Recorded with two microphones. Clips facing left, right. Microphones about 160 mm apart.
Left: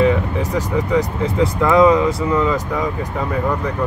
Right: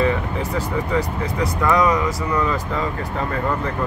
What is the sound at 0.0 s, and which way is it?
Speech, 15° left (ahead or behind).